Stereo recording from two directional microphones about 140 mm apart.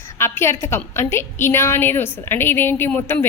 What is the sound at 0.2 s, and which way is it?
A woman's voice, 20° left (ahead or behind).